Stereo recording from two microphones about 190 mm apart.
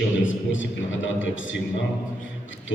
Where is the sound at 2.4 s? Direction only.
85° left.